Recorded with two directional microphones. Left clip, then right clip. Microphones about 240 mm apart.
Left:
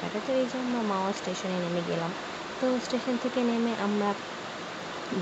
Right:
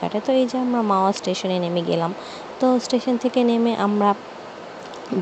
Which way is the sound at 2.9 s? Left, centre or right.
Right.